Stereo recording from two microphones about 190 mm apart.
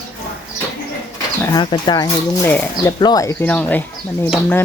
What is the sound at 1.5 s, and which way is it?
Speech, 25° left (ahead or behind).